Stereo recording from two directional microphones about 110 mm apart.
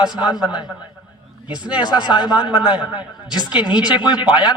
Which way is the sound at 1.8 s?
40° left (ahead or behind).